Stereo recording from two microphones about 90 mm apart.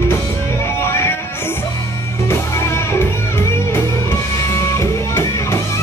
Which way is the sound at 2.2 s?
30° left (ahead or behind).